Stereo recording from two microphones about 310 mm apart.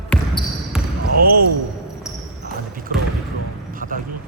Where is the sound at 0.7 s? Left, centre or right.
Centre.